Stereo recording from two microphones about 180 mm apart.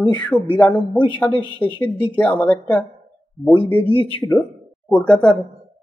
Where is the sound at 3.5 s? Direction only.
30° left (ahead or behind).